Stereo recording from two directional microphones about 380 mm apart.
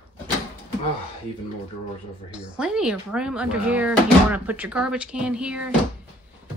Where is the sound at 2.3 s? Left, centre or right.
Centre.